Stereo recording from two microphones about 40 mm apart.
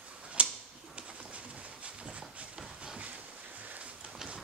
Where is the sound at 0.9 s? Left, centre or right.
Right.